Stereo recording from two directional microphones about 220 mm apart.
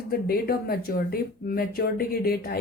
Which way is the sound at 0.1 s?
45° left (ahead or behind).